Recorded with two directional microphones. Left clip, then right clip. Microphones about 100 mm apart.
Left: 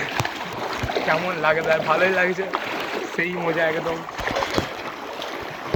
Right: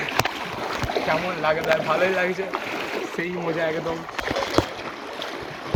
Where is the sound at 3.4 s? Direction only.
75° right (ahead or behind).